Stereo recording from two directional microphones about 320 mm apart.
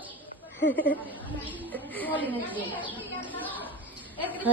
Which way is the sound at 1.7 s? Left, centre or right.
Centre.